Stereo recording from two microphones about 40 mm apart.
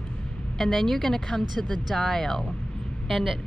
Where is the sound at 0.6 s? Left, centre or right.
Centre.